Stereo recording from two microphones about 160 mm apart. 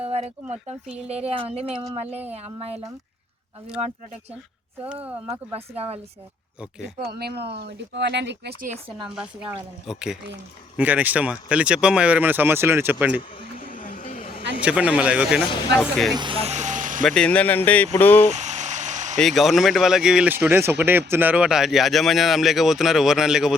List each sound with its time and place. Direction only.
0.0 s a sound: 40° right (ahead or behind)
0.9 s speech: 40° right (ahead or behind)
5.5 s speech: 40° right (ahead or behind)
6.6 s speech: 5° right (ahead or behind)
7.1 s speech: 85° right
9.9 s speech: 5° right (ahead or behind)
13.6 s vehicle: 60° left (ahead or behind)
14.2 s a sound: 35° left (ahead or behind)
14.6 s speech: 5° right (ahead or behind)
16.1 s speech: 30° right (ahead or behind); by 17.0 s 55° right (ahead or behind)
17.0 s speech: 5° left (ahead or behind)
18.3 s a sound: 45° right (ahead or behind)
19.2 s speech: centre (ahead or behind)